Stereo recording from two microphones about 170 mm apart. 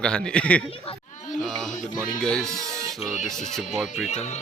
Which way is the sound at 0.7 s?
35° left (ahead or behind).